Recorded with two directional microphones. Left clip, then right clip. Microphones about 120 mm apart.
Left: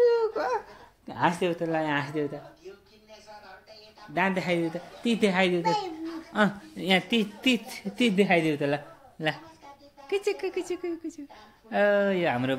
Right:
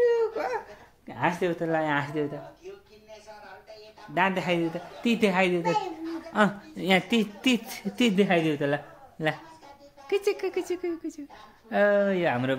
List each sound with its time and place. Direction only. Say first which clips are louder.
0.0 s babbling: left 1 dB; centre (ahead or behind)
1.0 s a sound: left 1 dB; 5° left (ahead or behind)
1.4 s speech: right 1 dB; 20° right (ahead or behind)
4.1 s speech: right 1 dB; 20° right (ahead or behind)
5.3 s a child's voice: even; 15° right (ahead or behind)
7.0 s speech: right 1 dB; 35° right (ahead or behind)
8.2 s speech: left 1 dB; 25° right (ahead or behind)
10.0 s speech: right 2 dB; 40° right (ahead or behind); by 12.5 s 25° right (ahead or behind)